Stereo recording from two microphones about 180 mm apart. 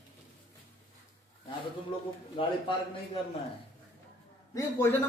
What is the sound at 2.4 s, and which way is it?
Speech, 30° left (ahead or behind).